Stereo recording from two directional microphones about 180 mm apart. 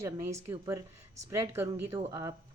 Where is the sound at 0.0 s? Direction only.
15° right (ahead or behind).